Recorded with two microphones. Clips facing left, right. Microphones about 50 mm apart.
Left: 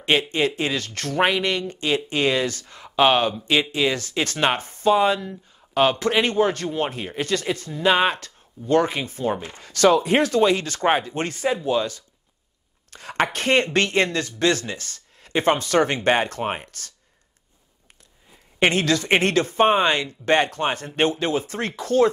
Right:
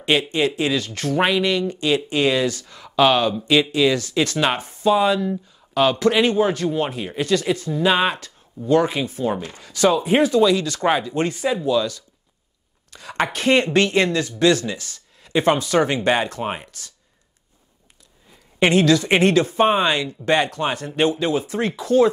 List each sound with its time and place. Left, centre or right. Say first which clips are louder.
0.0 s speech: right 1 dB; left
9.4 s speech: right 3 dB; left
9.7 s speech: even; left
18.7 s speech: right 5 dB; left